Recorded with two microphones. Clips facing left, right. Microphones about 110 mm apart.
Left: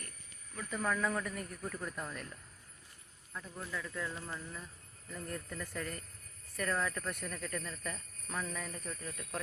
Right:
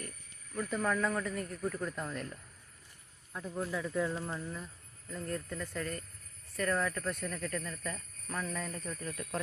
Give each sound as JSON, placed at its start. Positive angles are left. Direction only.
{"t": 0.5, "sound": "speech", "side_deg": 0}
{"t": 3.3, "sound": "speech", "side_deg": -15}
{"t": 4.5, "sound": "a sound", "side_deg": -5}
{"t": 5.3, "sound": "speech", "side_deg": 5}